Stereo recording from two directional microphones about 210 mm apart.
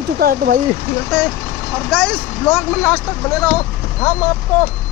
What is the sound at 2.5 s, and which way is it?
Speech, 5° left (ahead or behind).